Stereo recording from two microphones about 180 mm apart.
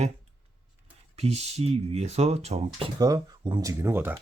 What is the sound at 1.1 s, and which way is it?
Speech, 35° right (ahead or behind).